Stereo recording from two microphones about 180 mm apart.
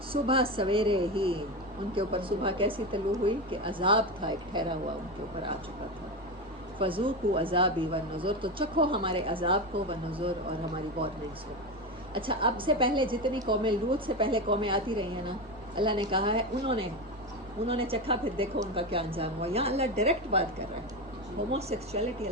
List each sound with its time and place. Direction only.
0.1 s speech: 30° right (ahead or behind)
6.7 s speech: 30° right (ahead or behind)
12.1 s a woman's voice: 30° right (ahead or behind)
21.5 s a woman's voice: 35° right (ahead or behind)